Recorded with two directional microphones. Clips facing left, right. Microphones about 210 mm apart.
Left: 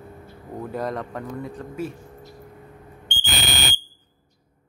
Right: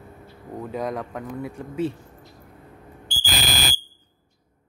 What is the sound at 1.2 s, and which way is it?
Speech, 10° right (ahead or behind).